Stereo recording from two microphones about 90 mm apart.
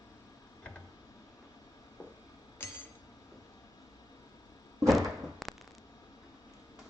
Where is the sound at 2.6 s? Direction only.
25° left (ahead or behind).